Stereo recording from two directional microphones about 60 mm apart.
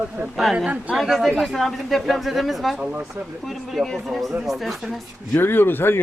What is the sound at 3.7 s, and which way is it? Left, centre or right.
Speech, centre.